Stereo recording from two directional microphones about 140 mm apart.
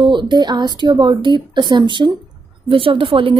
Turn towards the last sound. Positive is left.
turn(degrees=-40)  # may be behind; listen again after turning